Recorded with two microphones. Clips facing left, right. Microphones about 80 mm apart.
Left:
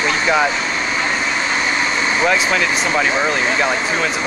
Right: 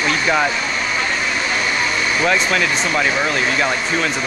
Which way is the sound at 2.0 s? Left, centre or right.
Left.